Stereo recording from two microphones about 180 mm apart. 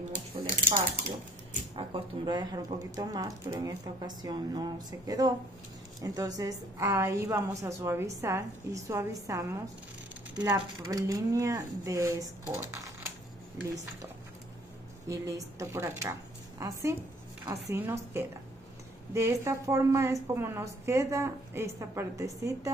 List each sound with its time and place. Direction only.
0.1 s a sound: 50° right (ahead or behind)
1.8 s a woman's voice: 25° right (ahead or behind)
12.6 s typing: 15° right (ahead or behind)
15.0 s a woman's voice: 15° right (ahead or behind)